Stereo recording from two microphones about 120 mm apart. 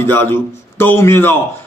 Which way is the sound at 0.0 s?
20° left (ahead or behind).